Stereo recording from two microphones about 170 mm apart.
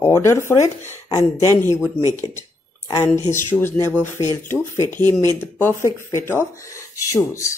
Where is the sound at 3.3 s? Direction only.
15° left (ahead or behind).